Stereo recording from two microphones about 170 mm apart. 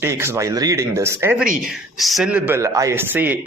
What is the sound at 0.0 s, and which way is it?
Speech, 15° right (ahead or behind).